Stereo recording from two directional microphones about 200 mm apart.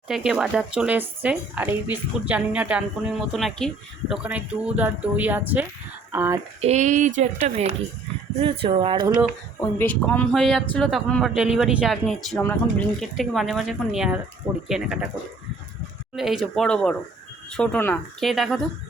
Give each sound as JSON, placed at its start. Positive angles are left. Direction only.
{"t": 0.1, "sound": "speech", "side_deg": 0}
{"t": 6.6, "sound": "speech", "side_deg": -35}
{"t": 9.6, "sound": "speech", "side_deg": 10}
{"t": 16.1, "sound": "speech", "side_deg": 0}